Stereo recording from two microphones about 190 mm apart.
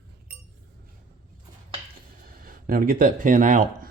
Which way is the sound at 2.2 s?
50° right (ahead or behind).